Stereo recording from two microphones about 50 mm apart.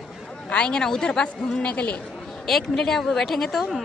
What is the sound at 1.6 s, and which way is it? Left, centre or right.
Speech, left.